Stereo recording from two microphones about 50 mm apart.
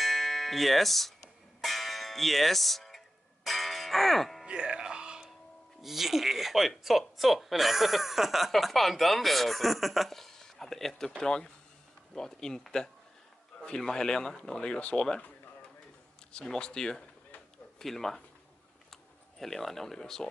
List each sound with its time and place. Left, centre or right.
0.0 s music: centre
4.5 s music: centre
5.8 s speech: centre; by 15.0 s left
16.3 s speech: centre
19.3 s speech: centre